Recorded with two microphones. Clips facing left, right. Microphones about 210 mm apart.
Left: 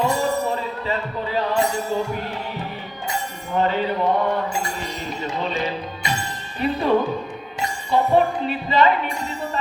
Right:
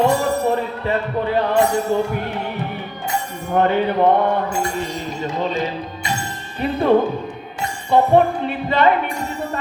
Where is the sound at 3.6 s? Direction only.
55° right (ahead or behind).